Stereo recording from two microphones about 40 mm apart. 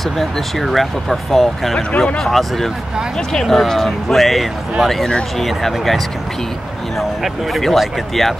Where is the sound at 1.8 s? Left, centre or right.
Left.